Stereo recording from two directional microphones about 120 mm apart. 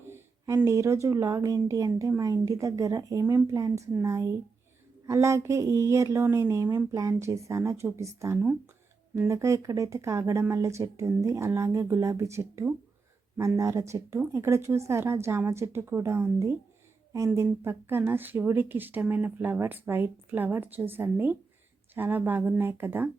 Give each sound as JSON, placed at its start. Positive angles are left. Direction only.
{"t": 0.1, "sound": "a woman's voice", "side_deg": -20}